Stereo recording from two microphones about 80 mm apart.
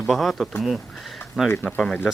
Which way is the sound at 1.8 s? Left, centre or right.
Centre.